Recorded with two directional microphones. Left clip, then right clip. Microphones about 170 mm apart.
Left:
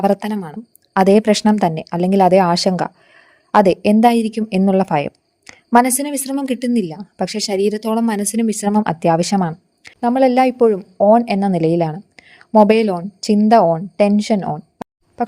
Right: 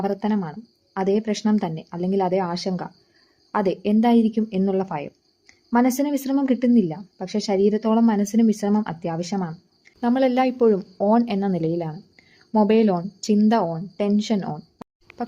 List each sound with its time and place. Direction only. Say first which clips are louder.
0.0 s a woman's voice: left 7 dB; 45° left (ahead or behind)
10.0 s a woman's voice: left 7 dB; 25° left (ahead or behind)
14.8 s a sound: left 11 dB; centre (ahead or behind)